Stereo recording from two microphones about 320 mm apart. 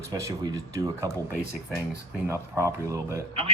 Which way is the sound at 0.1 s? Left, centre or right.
Centre.